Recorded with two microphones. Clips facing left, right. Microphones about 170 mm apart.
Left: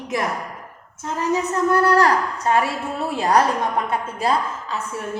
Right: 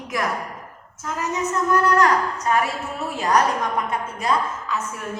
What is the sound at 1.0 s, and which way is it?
A woman's voice, 30° left (ahead or behind).